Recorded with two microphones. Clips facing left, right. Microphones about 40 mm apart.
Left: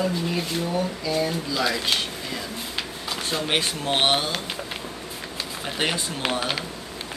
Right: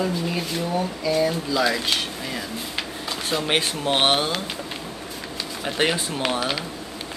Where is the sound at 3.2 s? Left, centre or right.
Centre.